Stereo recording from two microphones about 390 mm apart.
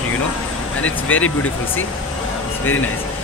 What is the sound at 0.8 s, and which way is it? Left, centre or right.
Speech, left.